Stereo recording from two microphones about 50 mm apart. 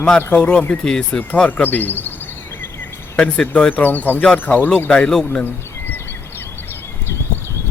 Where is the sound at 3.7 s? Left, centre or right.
Left.